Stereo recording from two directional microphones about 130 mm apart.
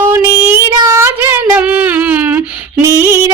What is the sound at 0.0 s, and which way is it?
Child singing, 15° right (ahead or behind).